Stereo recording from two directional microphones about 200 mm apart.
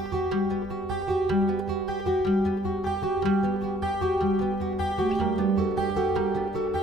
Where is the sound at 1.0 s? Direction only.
Centre (ahead or behind).